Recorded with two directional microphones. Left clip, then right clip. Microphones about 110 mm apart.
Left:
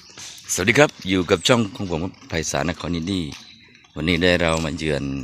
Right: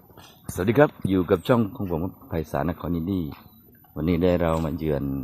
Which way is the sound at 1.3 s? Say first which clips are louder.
Left 4 dB; 10° left (ahead or behind).